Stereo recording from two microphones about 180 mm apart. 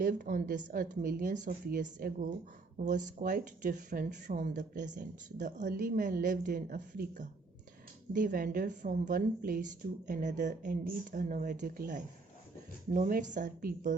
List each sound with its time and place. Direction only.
0.0 s speech: 45° right (ahead or behind)